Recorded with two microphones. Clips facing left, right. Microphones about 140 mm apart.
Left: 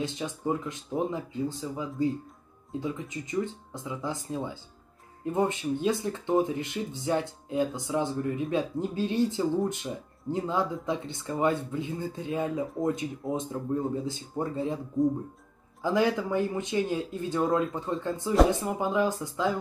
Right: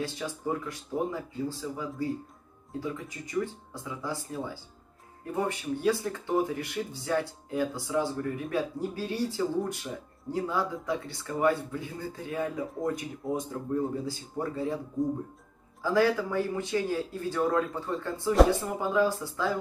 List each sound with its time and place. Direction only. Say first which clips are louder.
0.0 s speech: left 2 dB; 20° left (ahead or behind)
15.8 s speech: even; 20° left (ahead or behind)